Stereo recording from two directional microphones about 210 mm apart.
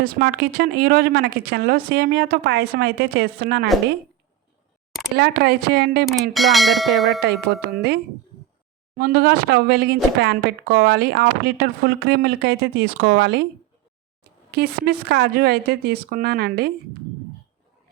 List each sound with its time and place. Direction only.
0.0 s a woman's voice: 50° right (ahead or behind)
5.1 s a woman's voice: 50° right (ahead or behind)
6.3 s bell: centre (ahead or behind)
7.4 s a woman's voice: 50° right (ahead or behind)
9.0 s a woman's voice: 45° right (ahead or behind)
14.5 s a woman's voice: 50° right (ahead or behind)